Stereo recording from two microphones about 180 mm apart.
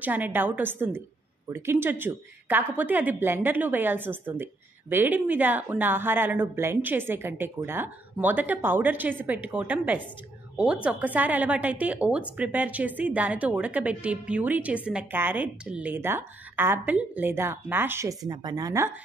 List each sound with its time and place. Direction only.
0.0 s a woman's voice: 10° right (ahead or behind)